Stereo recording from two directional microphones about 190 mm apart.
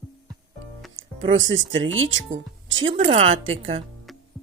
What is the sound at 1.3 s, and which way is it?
Speech, 90° right.